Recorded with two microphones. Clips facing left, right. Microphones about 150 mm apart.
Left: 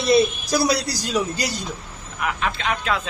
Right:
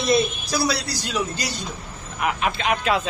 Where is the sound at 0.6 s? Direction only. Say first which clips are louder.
Left 3 dB; 40° left (ahead or behind).